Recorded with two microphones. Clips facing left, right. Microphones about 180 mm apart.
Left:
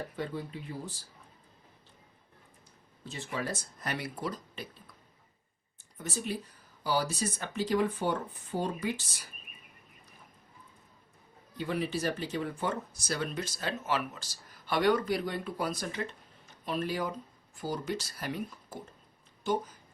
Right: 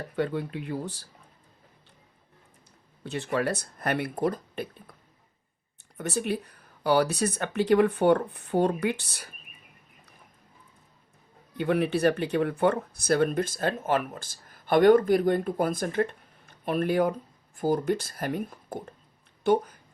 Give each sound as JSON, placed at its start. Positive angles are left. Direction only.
{"t": 0.2, "sound": "speech", "side_deg": -65}
{"t": 3.0, "sound": "speech", "side_deg": -65}
{"t": 6.0, "sound": "speech", "side_deg": -65}
{"t": 11.5, "sound": "speech", "side_deg": -60}